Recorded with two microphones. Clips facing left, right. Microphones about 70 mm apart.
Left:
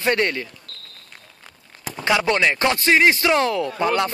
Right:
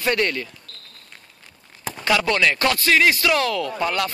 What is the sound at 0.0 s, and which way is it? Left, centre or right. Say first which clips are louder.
Speech: left 1 dB; left.